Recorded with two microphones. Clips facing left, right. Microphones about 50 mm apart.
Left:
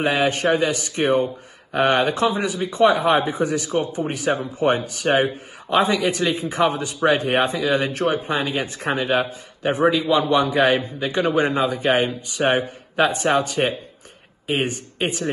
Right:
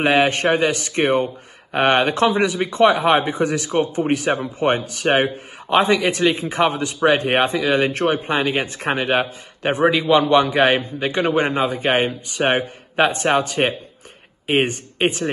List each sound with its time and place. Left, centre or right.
0.0 s a man's voice: right